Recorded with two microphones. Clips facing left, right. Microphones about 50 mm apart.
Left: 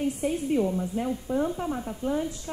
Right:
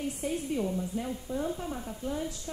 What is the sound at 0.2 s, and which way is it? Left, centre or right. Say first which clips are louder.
A woman's voice: left 5 dB; left.